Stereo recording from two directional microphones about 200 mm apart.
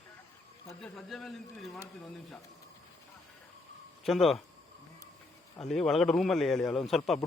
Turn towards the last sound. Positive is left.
turn(degrees=0)  # may be behind; listen again after turning